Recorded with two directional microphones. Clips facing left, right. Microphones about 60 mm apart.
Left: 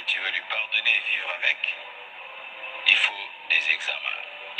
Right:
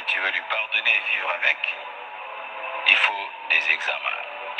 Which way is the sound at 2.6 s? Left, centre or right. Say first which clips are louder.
Right 3 dB; right.